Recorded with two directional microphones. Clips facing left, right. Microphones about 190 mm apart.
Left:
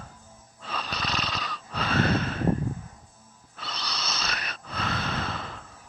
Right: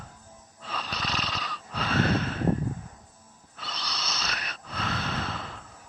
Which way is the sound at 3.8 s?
60° left (ahead or behind).